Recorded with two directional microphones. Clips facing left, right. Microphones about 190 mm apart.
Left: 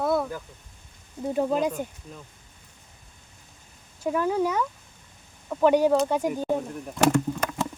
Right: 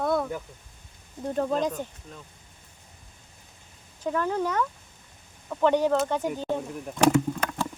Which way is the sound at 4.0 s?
10° left (ahead or behind).